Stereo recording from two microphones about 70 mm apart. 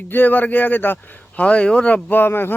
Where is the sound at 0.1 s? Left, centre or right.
Left.